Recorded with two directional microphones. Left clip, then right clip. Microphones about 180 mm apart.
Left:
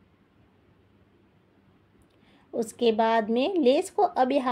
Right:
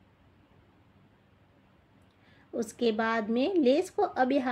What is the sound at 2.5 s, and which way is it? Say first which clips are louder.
A woman's voice: left 5 dB; 25° left (ahead or behind).